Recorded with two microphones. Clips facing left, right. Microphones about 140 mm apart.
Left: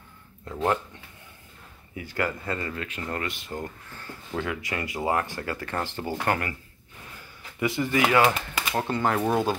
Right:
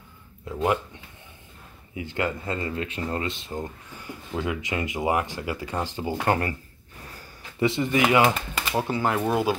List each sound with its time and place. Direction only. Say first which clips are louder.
0.5 s speech: right 1 dB; 5° right (ahead or behind)
2.0 s speech: right 1 dB; 20° right (ahead or behind)
7.2 s a sound: right 4 dB; 25° right (ahead or behind)
8.7 s speech: right 1 dB; 5° right (ahead or behind)